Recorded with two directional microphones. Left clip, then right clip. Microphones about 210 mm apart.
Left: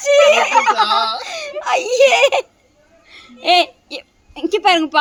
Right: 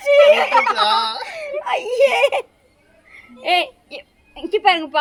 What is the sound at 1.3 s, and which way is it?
A woman's voice, 35° left (ahead or behind).